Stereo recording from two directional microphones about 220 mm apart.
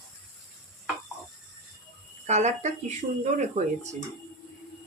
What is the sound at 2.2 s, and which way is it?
Speech, 30° right (ahead or behind).